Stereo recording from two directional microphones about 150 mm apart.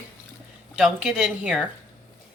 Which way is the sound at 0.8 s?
Centre (ahead or behind).